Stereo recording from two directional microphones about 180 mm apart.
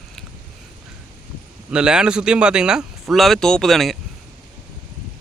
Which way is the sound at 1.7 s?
5° right (ahead or behind).